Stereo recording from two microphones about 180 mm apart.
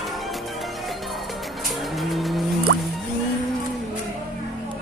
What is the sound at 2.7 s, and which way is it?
Music, 90° right.